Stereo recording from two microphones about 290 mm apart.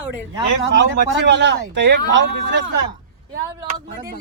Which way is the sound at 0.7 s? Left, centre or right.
Right.